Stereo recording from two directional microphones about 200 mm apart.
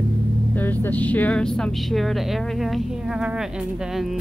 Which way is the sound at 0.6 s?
10° left (ahead or behind).